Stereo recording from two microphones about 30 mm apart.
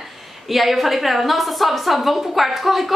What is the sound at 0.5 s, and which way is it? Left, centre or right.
A woman's voice, centre.